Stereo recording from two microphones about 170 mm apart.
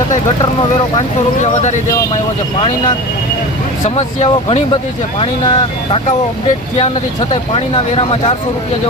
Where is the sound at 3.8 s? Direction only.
40° left (ahead or behind).